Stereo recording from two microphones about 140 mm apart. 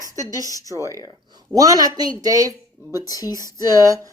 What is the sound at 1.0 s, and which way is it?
Speech, 25° right (ahead or behind).